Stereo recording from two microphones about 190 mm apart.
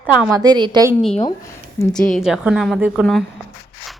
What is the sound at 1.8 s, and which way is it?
Speech, 15° left (ahead or behind).